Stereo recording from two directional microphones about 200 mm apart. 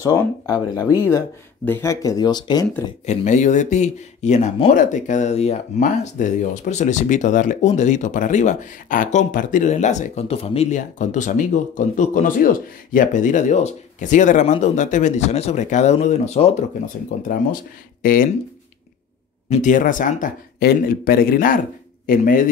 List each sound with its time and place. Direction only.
0.0 s speech: 20° left (ahead or behind)
1.7 s speech: 15° left (ahead or behind)
3.1 s speech: 35° left (ahead or behind)
18.0 s speech: 45° left (ahead or behind)
19.5 s speech: 40° left (ahead or behind)